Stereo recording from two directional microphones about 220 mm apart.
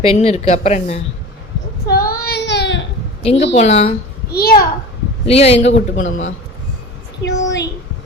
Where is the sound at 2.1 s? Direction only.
45° left (ahead or behind).